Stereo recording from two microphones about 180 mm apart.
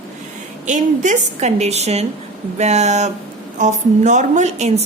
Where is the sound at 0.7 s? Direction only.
45° right (ahead or behind).